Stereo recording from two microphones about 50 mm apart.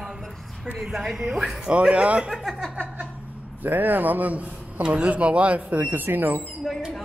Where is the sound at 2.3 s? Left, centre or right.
Centre.